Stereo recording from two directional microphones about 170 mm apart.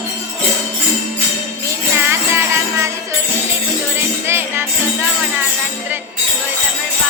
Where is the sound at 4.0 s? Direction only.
15° right (ahead or behind).